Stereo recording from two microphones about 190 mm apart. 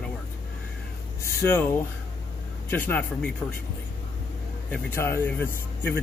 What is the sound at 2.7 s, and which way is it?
Speech, 10° left (ahead or behind).